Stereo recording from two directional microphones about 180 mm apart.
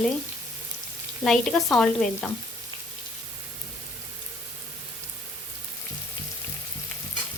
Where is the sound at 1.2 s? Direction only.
Centre (ahead or behind).